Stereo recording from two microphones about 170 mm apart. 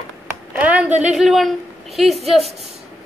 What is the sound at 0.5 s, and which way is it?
A woman's voice, 10° right (ahead or behind).